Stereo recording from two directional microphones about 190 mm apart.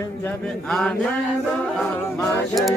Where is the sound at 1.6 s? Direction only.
10° left (ahead or behind).